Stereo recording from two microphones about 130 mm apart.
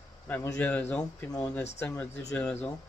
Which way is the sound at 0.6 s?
10° left (ahead or behind).